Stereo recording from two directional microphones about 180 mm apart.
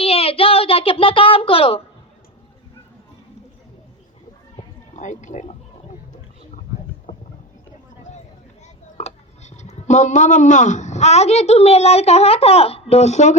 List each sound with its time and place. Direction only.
0.0 s child singing: 30° left (ahead or behind)
4.9 s speech: 45° left (ahead or behind)
8.6 s speech: 40° left (ahead or behind)